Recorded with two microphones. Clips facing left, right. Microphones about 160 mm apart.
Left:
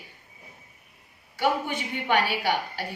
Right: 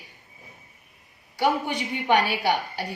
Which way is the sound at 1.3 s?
15° right (ahead or behind).